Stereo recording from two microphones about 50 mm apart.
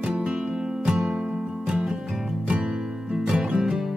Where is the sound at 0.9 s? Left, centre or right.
Centre.